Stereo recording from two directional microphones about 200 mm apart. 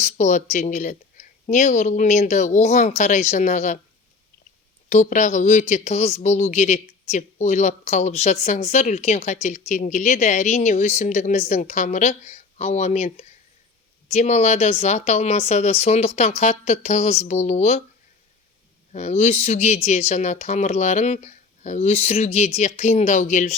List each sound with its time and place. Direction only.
0.0 s speech: 35° left (ahead or behind)
4.9 s speech: 35° left (ahead or behind)
18.9 s speech: 35° left (ahead or behind)